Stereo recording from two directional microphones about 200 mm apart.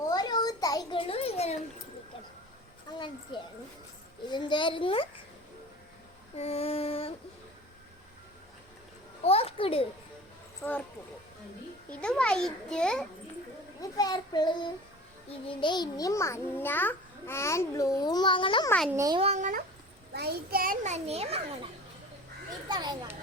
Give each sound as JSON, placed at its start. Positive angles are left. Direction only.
{"t": 0.1, "sound": "a sound", "side_deg": 20}
{"t": 3.3, "sound": "child singing", "side_deg": 25}
{"t": 6.3, "sound": "child singing", "side_deg": 30}
{"t": 9.2, "sound": "a child's voice", "side_deg": 30}
{"t": 10.6, "sound": "speech", "side_deg": 5}
{"t": 11.9, "sound": "a child's voice", "side_deg": 5}
{"t": 13.9, "sound": "child singing", "side_deg": 20}
{"t": 15.3, "sound": "a child's voice", "side_deg": 25}
{"t": 18.9, "sound": "a child's voice", "side_deg": -15}
{"t": 19.2, "sound": "a child's voice", "side_deg": -35}
{"t": 20.1, "sound": "a child's voice", "side_deg": -50}
{"t": 22.7, "sound": "a child's voice", "side_deg": -20}